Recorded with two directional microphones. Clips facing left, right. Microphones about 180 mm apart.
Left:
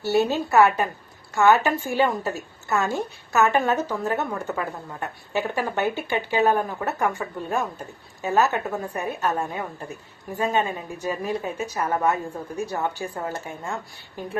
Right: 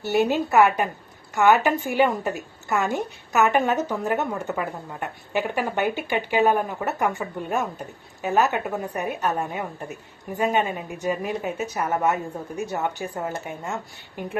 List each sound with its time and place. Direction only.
0.0 s a woman's voice: 15° right (ahead or behind)